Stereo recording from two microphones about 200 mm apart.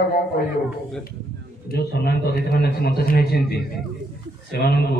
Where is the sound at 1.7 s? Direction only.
50° left (ahead or behind).